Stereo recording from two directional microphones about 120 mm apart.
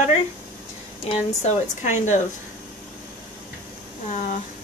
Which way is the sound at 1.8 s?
85° left.